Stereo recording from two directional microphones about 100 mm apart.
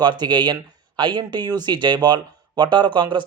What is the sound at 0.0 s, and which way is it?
Speech, 45° right (ahead or behind).